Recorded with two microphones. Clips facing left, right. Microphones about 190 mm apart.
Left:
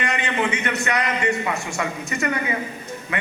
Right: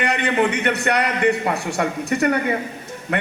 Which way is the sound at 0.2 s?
65° right (ahead or behind).